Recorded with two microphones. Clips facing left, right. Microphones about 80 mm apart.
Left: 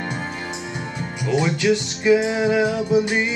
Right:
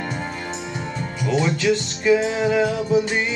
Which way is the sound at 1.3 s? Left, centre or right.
Centre.